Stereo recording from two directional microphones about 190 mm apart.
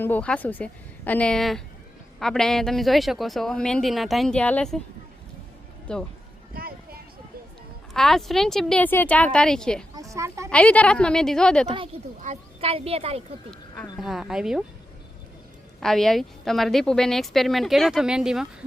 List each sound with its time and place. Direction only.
0.0 s a woman's voice: 10° left (ahead or behind)
5.9 s a woman's voice: 5° left (ahead or behind)
6.5 s a sound: 50° right (ahead or behind)
7.9 s a woman's voice: centre (ahead or behind)
9.9 s speech: 15° right (ahead or behind)
10.5 s a woman's voice: 5° left (ahead or behind)
12.2 s speech: 35° right (ahead or behind)
14.0 s a woman's voice: centre (ahead or behind)
15.8 s a woman's voice: centre (ahead or behind)